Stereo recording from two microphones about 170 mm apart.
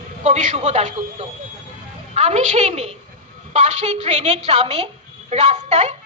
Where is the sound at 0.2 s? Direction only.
45° right (ahead or behind).